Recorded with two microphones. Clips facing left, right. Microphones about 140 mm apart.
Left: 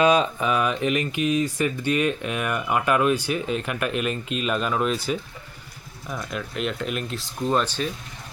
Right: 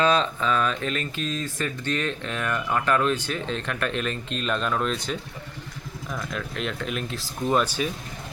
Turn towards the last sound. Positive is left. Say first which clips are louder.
# even
turn(degrees=-10)  # may be behind; listen again after turning